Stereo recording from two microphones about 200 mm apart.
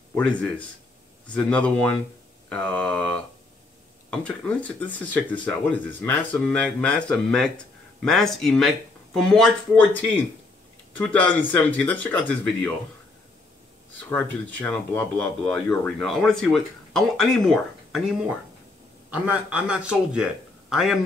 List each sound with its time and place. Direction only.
0.1 s speech: 5° left (ahead or behind)
11.0 s speech: 5° left (ahead or behind)
14.0 s speech: 10° left (ahead or behind)
19.0 s speech: 5° right (ahead or behind)